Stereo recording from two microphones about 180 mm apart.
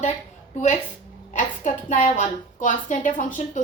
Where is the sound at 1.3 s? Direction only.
40° left (ahead or behind).